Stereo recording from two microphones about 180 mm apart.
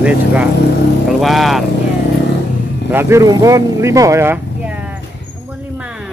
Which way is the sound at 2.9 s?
15° right (ahead or behind).